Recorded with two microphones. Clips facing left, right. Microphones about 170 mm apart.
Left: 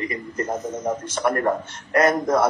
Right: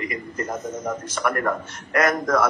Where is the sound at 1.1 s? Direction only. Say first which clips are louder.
Left 2 dB; 30° left (ahead or behind).